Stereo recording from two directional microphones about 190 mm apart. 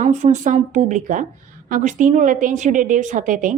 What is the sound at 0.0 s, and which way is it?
A woman's voice, 40° right (ahead or behind).